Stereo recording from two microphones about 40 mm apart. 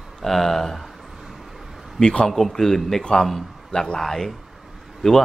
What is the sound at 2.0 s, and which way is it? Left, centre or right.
Speech, left.